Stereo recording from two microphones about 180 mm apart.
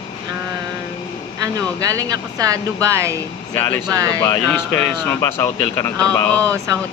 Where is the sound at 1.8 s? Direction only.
20° right (ahead or behind).